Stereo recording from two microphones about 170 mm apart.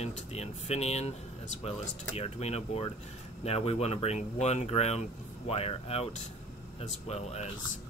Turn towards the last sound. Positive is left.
turn(degrees=40)  # may be behind; listen again after turning